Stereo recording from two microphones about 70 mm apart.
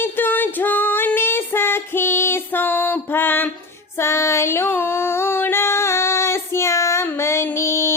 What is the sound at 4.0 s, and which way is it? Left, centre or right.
Female singing, left.